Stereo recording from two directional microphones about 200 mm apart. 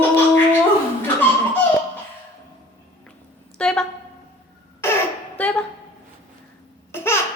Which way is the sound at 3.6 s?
5° left (ahead or behind).